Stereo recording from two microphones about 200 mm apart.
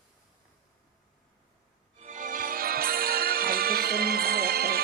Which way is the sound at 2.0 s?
40° right (ahead or behind).